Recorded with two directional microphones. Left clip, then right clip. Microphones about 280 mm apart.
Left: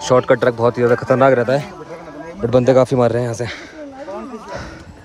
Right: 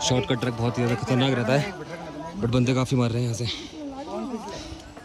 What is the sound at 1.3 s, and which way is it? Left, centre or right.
Speech, centre.